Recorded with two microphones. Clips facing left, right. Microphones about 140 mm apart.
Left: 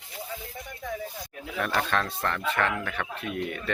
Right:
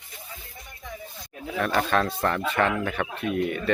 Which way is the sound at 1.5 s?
Centre (ahead or behind).